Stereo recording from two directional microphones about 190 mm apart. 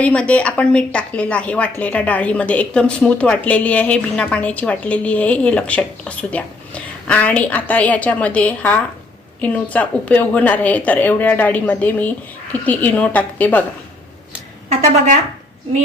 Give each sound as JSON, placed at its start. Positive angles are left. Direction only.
{"t": 0.0, "sound": "a woman's voice", "side_deg": 5}
{"t": 14.7, "sound": "speech", "side_deg": -40}